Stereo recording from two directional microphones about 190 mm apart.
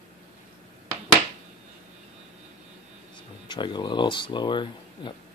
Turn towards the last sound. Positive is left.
turn(degrees=25)  # may be behind; listen again after turning